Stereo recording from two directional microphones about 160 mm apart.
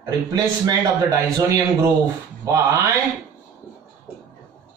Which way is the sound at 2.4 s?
20° right (ahead or behind).